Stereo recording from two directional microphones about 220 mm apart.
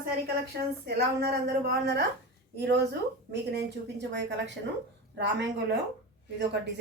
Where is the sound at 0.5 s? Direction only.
45° right (ahead or behind).